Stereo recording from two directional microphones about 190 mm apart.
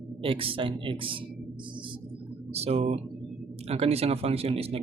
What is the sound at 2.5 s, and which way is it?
Speech, 30° right (ahead or behind).